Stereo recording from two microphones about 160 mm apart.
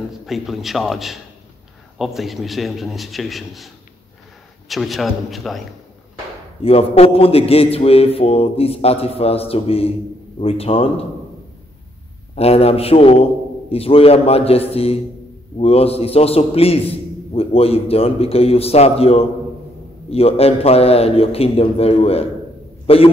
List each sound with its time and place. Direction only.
0.3 s a man's voice: centre (ahead or behind)
6.6 s a man's voice: 40° left (ahead or behind)
12.4 s a man's voice: 40° left (ahead or behind)